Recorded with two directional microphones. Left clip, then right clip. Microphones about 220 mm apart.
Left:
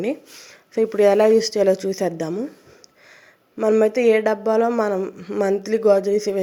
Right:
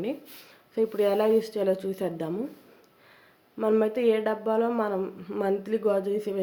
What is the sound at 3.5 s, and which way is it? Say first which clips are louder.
A woman's voice: left 7 dB; 20° left (ahead or behind).